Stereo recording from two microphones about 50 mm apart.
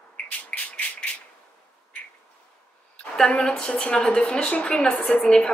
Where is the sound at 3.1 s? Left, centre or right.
Centre.